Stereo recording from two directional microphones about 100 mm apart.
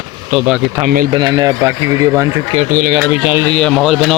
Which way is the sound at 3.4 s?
10° left (ahead or behind).